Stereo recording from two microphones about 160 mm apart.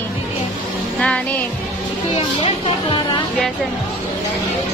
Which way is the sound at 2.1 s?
35° left (ahead or behind).